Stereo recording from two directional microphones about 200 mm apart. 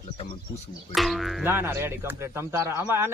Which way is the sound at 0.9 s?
Centre (ahead or behind).